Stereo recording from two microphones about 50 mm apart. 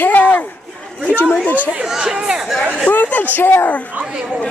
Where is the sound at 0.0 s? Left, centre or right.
Left.